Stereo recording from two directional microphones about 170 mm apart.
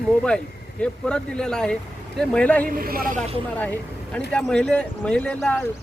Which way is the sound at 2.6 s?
60° right (ahead or behind).